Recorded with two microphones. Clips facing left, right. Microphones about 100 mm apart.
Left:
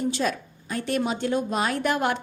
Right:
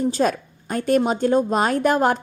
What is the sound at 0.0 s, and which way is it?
A woman's voice, 40° right (ahead or behind).